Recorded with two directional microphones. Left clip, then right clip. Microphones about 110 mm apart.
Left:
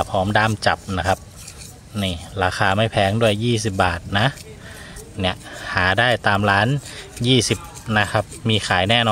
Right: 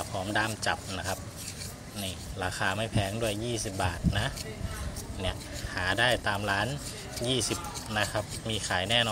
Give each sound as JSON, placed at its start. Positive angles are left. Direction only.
{"t": 0.0, "sound": "a man's voice", "side_deg": 20}